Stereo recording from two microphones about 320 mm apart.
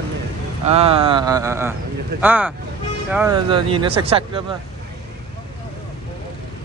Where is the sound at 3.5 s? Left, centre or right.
Centre.